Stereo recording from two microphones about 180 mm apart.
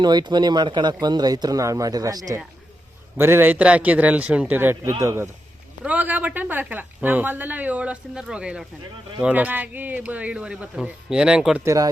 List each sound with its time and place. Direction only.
0.0 s speech: 25° right (ahead or behind); by 11.6 s 5° right (ahead or behind)
11.6 s speech: 15° right (ahead or behind)